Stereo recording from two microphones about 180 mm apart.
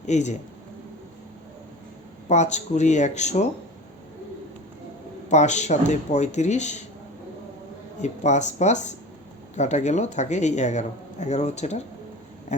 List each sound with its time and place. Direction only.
0.0 s speech: 40° left (ahead or behind)
2.3 s speech: 40° left (ahead or behind)
5.3 s speech: 40° left (ahead or behind)
8.0 s speech: 40° left (ahead or behind)